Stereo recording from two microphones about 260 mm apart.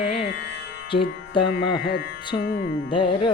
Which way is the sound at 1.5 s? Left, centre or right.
Left.